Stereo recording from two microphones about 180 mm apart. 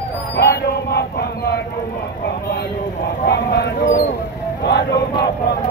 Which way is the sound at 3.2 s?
65° left (ahead or behind).